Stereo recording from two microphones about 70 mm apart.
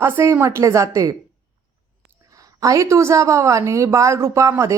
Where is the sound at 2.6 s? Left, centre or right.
Right.